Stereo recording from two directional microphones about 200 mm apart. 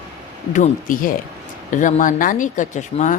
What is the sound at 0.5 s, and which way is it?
Speech, 40° left (ahead or behind).